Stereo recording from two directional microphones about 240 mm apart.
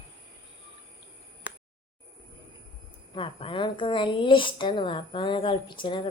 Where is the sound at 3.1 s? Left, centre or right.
Left.